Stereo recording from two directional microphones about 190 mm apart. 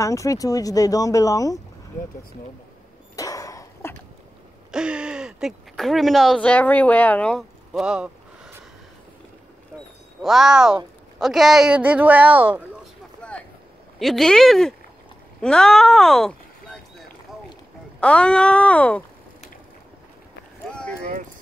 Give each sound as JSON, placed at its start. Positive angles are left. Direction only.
{"t": 0.0, "sound": "speech", "side_deg": 15}
{"t": 3.2, "sound": "a sound", "side_deg": 20}
{"t": 4.6, "sound": "speech", "side_deg": -5}
{"t": 10.2, "sound": "speech", "side_deg": 0}
{"t": 13.2, "sound": "vehicle", "side_deg": 5}
{"t": 13.9, "sound": "speech", "side_deg": 0}
{"t": 18.0, "sound": "speech", "side_deg": 5}